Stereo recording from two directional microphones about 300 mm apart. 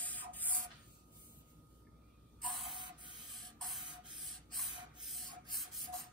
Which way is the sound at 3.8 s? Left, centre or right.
Centre.